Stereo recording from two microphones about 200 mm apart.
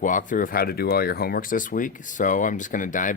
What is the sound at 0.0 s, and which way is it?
Speech, 40° left (ahead or behind).